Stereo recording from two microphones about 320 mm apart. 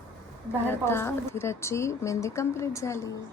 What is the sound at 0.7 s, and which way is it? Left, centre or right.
A woman's voice, centre.